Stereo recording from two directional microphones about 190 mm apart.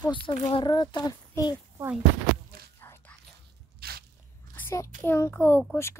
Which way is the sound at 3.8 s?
55° right (ahead or behind).